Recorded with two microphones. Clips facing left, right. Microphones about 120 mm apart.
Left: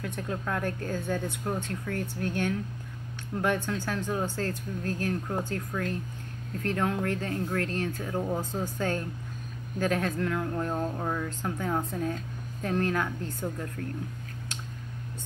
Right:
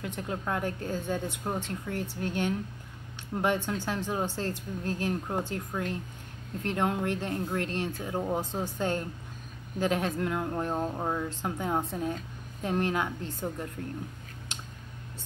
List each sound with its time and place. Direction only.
0.0 s speech: 20° right (ahead or behind)